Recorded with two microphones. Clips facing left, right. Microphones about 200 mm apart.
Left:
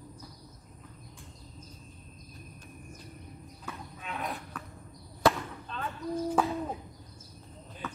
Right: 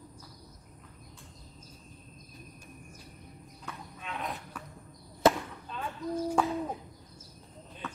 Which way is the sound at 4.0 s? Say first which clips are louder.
Left 1 dB; centre (ahead or behind).